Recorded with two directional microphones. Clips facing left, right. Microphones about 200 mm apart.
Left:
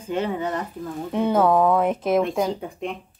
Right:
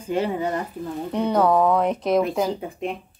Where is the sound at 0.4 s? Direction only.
30° right (ahead or behind).